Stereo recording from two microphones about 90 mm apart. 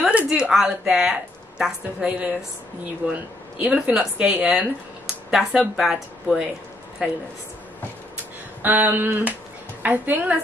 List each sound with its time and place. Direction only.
0.0 s a woman's voice: 15° right (ahead or behind)
8.6 s a sound: 20° right (ahead or behind)
9.8 s a woman's voice: 20° right (ahead or behind)